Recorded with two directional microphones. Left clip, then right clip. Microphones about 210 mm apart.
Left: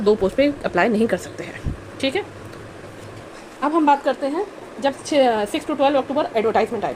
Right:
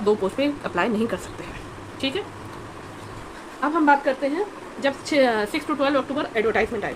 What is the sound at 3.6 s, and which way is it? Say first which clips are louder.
Speech: left 3 dB; 20° left (ahead or behind).